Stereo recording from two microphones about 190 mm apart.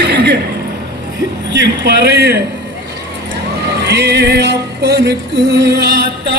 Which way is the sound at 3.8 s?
60° right (ahead or behind).